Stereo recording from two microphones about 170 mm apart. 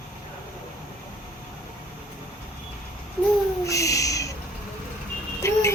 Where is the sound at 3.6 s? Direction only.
20° left (ahead or behind).